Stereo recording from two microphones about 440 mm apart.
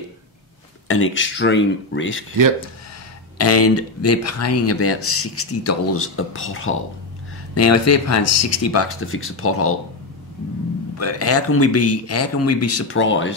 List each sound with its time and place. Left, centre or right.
0.8 s speech: left
3.3 s speech: left
11.0 s speech: left